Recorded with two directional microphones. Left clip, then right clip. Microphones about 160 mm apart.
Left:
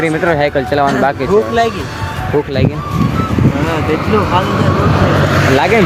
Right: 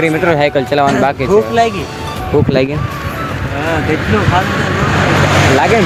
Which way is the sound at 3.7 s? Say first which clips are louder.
Right 2 dB; 5° right (ahead or behind).